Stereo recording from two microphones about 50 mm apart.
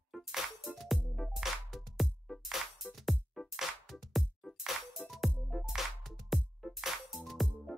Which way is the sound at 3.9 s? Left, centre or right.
Centre.